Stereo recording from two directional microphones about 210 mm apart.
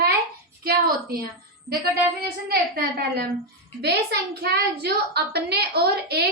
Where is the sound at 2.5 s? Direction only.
45° right (ahead or behind).